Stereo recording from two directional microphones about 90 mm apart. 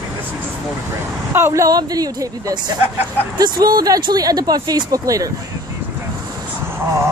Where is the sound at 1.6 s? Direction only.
45° right (ahead or behind).